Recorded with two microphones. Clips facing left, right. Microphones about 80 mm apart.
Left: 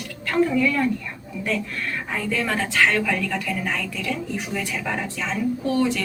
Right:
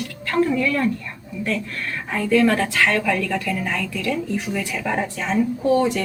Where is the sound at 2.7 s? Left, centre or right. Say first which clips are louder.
Right 1 dB; centre.